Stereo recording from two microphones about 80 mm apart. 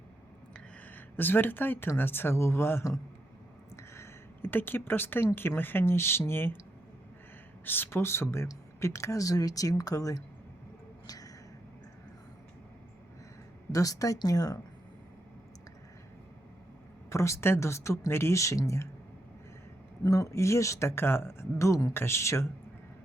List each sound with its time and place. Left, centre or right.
0.9 s speech: left
7.6 s speech: left
11.0 s a sound: left
13.7 s speech: left
17.1 s speech: left
20.1 s speech: left